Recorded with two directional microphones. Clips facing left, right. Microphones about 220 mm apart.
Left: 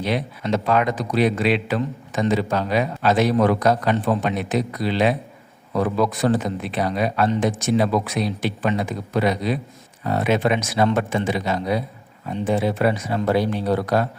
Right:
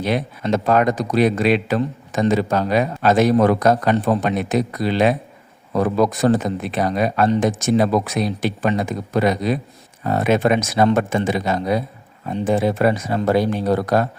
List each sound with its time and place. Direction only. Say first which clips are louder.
0.0 s speech: right 3 dB; 45° right (ahead or behind)